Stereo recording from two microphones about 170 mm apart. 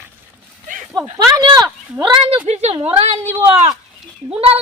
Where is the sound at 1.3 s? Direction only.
20° right (ahead or behind).